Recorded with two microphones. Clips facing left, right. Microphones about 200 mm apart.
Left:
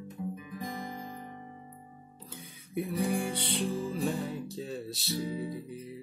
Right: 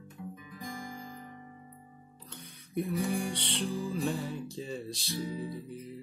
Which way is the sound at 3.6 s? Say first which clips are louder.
Even; 25° left (ahead or behind).